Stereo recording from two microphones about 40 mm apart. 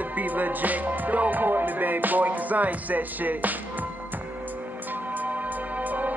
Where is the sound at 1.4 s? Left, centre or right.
Right.